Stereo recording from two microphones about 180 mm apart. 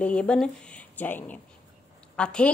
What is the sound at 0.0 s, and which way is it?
Speech, 5° left (ahead or behind).